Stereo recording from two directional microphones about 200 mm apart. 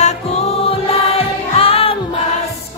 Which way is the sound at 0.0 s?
30° left (ahead or behind).